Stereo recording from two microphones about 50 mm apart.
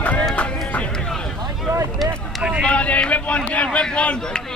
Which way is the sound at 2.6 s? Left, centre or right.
Left.